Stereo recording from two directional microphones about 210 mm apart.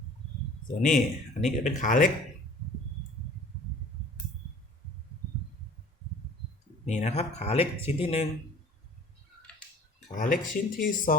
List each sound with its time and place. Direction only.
0.9 s speech: centre (ahead or behind)
1.6 s speech: 35° left (ahead or behind)
6.8 s speech: 30° left (ahead or behind)
10.2 s speech: 40° left (ahead or behind)